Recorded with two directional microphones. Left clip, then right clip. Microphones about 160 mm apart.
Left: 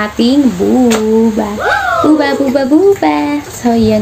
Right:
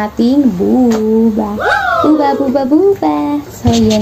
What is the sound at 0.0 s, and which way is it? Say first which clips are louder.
Speech: left 1 dB; 10° left (ahead or behind).